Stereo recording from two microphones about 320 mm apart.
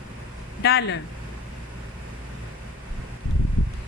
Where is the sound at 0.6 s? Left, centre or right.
Left.